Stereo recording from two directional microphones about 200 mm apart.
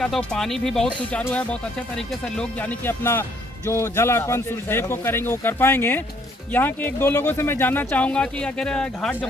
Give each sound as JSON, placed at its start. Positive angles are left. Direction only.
{"t": 0.0, "sound": "speech", "side_deg": 5}